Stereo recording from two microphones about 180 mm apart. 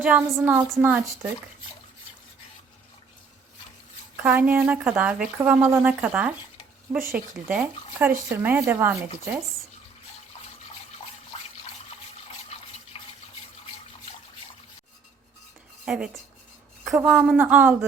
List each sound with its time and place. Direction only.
0.0 s a woman's voice: 10° right (ahead or behind)
4.2 s a woman's voice: 10° right (ahead or behind)
12.5 s water: 35° left (ahead or behind)
12.9 s toothbrush: 30° left (ahead or behind)
15.9 s speech: 5° right (ahead or behind)